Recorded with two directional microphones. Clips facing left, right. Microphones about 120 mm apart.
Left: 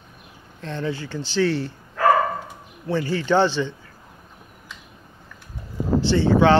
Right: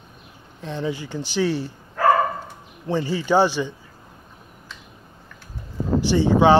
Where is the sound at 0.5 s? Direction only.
15° right (ahead or behind).